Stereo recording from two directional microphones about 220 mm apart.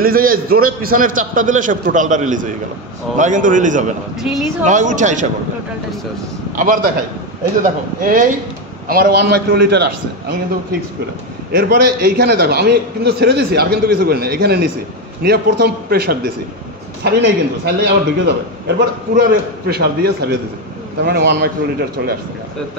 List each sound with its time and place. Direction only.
0.0 s a man's voice: 40° right (ahead or behind)
4.2 s speech: centre (ahead or behind)
4.6 s a man's voice: 35° right (ahead or behind)
6.5 s a man's voice: 35° right (ahead or behind)
8.0 s a man's voice: 40° right (ahead or behind)
11.5 s a man's voice: 45° right (ahead or behind)